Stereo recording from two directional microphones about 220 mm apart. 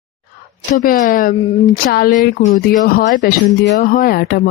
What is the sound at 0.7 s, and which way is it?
Speech, 40° left (ahead or behind).